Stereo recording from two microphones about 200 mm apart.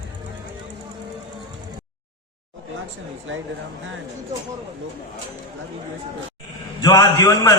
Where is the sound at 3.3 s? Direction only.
70° right (ahead or behind).